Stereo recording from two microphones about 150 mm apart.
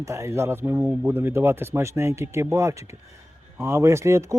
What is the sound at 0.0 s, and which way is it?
Speech, 20° right (ahead or behind).